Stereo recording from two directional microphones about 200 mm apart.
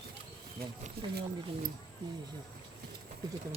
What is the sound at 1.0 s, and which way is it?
Speech, 50° right (ahead or behind).